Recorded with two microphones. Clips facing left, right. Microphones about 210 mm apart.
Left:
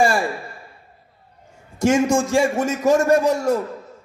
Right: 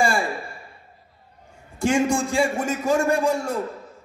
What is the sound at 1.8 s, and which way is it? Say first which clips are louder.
A man's voice: left 4 dB; 40° left (ahead or behind).